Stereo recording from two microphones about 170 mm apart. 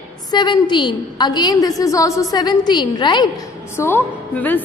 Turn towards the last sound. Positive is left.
turn(degrees=10)  # may be behind; listen again after turning